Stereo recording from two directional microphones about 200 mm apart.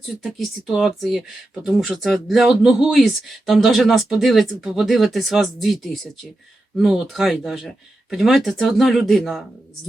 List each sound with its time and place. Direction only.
0.2 s speech: centre (ahead or behind)